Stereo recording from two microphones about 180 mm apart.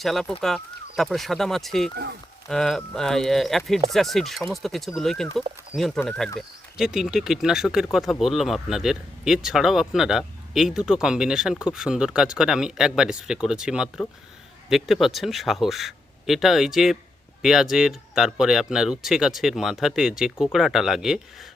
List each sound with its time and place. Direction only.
0.0 s speech: centre (ahead or behind)